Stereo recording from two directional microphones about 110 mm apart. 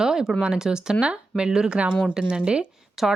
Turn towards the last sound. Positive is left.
turn(degrees=0)  # may be behind; listen again after turning